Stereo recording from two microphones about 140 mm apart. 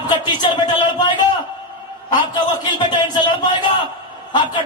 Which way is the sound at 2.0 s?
30° left (ahead or behind).